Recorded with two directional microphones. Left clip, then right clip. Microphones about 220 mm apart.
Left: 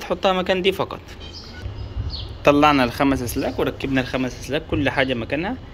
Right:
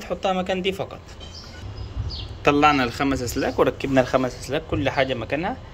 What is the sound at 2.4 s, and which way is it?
Speech, 10° right (ahead or behind).